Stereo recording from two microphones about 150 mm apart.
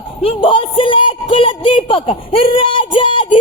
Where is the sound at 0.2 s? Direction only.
35° left (ahead or behind).